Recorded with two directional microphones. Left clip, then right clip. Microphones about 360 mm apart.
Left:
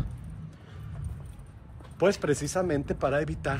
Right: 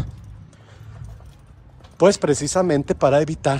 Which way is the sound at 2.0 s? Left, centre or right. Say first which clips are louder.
Right 9 dB; centre.